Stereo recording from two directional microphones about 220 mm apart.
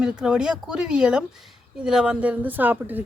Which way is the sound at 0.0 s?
5° right (ahead or behind).